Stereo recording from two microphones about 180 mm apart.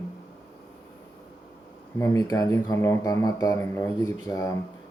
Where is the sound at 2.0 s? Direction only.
20° left (ahead or behind).